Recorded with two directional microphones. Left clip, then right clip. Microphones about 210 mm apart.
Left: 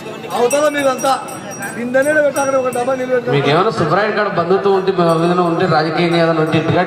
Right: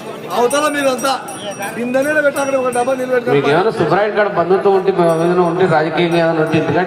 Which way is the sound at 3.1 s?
55° right (ahead or behind).